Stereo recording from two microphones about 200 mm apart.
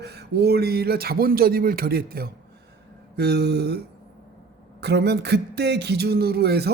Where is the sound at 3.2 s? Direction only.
55° right (ahead or behind).